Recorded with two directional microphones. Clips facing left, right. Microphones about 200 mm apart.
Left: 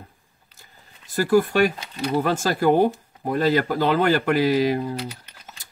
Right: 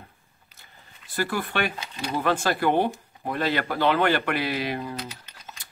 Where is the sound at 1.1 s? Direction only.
40° left (ahead or behind).